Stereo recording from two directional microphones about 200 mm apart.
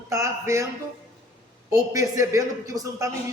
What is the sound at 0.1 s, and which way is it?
Speech, 15° right (ahead or behind).